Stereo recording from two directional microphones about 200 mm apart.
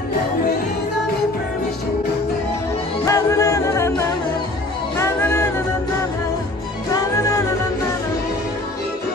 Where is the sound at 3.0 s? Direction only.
15° left (ahead or behind).